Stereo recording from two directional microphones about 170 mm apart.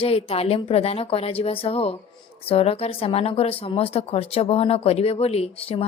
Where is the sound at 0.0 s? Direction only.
35° left (ahead or behind).